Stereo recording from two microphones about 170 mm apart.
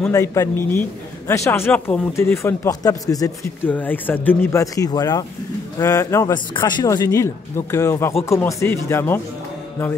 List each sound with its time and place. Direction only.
0.1 s a man's voice: 15° left (ahead or behind)